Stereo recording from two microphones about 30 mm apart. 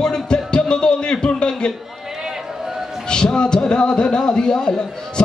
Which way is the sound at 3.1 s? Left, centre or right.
Left.